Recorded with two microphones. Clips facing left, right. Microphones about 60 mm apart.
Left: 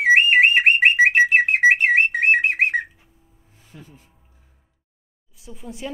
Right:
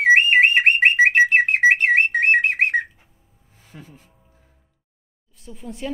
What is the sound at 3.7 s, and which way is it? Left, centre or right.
Speech, right.